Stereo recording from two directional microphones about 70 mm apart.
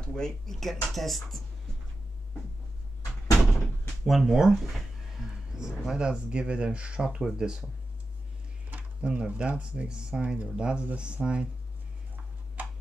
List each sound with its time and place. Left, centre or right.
0.0 s speech: centre
4.0 s speech: centre
12.6 s a sound: right